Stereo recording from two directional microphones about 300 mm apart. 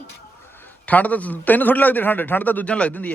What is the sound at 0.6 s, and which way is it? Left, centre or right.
A man's voice, centre.